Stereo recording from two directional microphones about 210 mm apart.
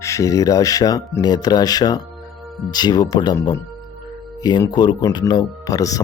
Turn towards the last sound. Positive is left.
turn(degrees=15)  # may be behind; listen again after turning